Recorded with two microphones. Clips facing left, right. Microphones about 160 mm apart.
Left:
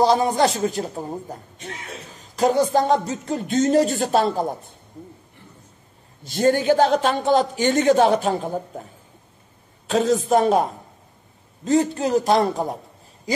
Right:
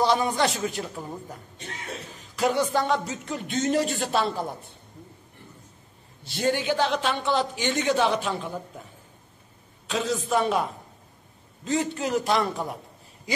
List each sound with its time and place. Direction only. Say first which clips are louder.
0.0 s speech: left 5 dB; 35° left (ahead or behind)
6.2 s a man's voice: left 7 dB; 45° left (ahead or behind)
9.8 s a man's voice: left 8 dB; 45° left (ahead or behind)